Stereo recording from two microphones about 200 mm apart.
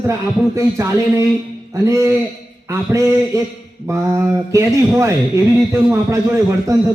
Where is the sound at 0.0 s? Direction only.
15° right (ahead or behind).